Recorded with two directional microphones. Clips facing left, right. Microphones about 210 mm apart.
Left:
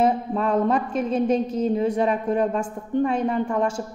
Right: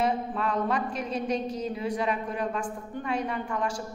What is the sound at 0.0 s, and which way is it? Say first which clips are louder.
A woman's voice: left 6 dB; 40° left (ahead or behind).